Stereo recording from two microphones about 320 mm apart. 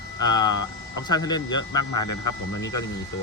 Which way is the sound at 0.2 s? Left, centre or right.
Left.